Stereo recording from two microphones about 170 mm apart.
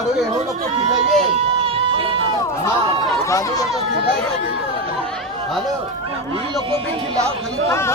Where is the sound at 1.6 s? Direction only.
35° right (ahead or behind).